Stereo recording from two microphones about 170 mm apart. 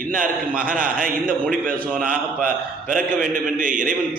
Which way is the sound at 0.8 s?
55° right (ahead or behind).